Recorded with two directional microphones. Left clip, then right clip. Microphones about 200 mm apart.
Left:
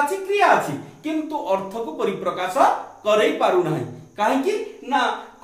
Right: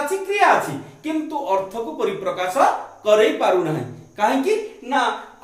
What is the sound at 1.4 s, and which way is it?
Speech, 15° left (ahead or behind).